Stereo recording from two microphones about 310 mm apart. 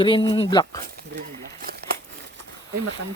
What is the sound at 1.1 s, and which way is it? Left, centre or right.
Crumpling, right.